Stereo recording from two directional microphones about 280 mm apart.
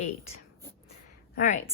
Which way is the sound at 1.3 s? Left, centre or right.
Left.